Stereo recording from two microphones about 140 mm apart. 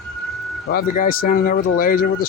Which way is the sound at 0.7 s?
90° left.